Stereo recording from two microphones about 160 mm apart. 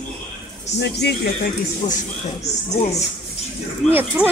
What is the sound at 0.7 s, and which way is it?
Speech, 90° left.